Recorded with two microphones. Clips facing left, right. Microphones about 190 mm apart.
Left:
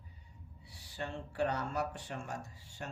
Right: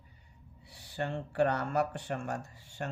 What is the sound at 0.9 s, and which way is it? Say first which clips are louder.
Speech: right 6 dB; 60° right (ahead or behind).